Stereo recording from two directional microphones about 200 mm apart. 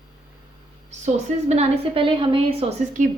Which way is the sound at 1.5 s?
30° right (ahead or behind).